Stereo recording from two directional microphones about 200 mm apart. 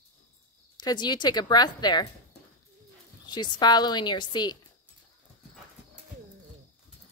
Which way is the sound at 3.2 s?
20° left (ahead or behind).